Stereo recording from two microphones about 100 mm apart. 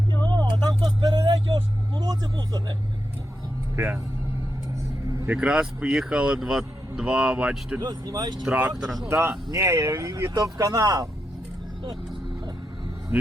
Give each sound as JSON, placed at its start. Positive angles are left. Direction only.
{"t": 0.3, "sound": "vehicle", "side_deg": -45}
{"t": 2.0, "sound": "speech", "side_deg": -45}
{"t": 3.8, "sound": "speech", "side_deg": -25}
{"t": 5.2, "sound": "speech", "side_deg": -15}
{"t": 7.8, "sound": "speech", "side_deg": -40}
{"t": 8.4, "sound": "speech", "side_deg": -15}
{"t": 8.7, "sound": "speech", "side_deg": 0}
{"t": 9.0, "sound": "speech", "side_deg": -25}